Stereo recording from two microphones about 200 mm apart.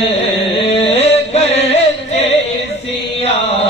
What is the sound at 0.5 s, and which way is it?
Carnatic music, 30° left (ahead or behind).